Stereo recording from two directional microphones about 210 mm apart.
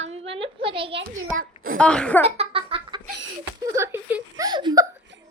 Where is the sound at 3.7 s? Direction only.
10° right (ahead or behind).